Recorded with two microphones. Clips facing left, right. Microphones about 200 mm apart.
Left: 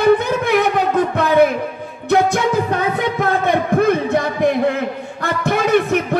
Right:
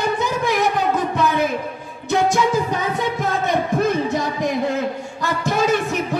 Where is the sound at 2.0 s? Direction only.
60° left (ahead or behind).